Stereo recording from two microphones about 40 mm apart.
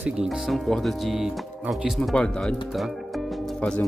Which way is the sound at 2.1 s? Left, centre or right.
Left.